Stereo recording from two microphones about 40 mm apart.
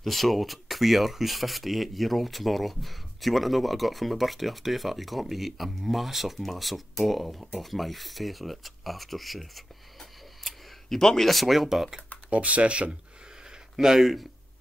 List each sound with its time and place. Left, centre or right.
0.0 s speech: centre
12.3 s speech: right
13.5 s a sound: centre